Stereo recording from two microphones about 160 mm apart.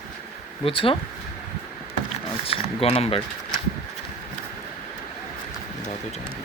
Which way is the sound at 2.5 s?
40° left (ahead or behind).